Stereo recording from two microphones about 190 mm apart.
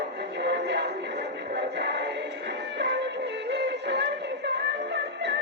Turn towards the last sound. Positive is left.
turn(degrees=-65)  # may be behind; listen again after turning